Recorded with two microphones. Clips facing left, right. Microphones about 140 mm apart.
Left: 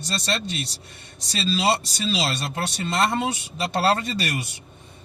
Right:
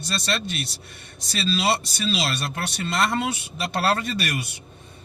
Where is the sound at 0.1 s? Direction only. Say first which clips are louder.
Even; 25° left (ahead or behind).